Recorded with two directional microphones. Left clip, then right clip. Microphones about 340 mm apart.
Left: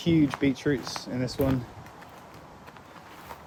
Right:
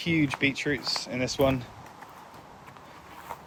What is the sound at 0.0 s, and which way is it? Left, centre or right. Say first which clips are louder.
Speech: left 1 dB; centre.